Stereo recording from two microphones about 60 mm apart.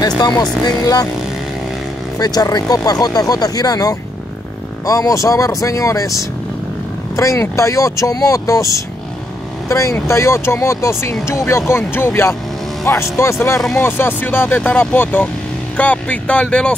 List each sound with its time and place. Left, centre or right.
2.1 s speech: left
4.8 s speech: left
7.2 s speech: left
9.7 s speech: left
12.8 s speech: left
13.7 s speech: left; by 16.7 s centre